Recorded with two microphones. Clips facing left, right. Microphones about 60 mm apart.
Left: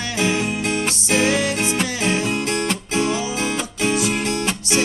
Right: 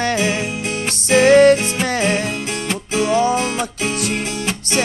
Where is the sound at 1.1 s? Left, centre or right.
Right.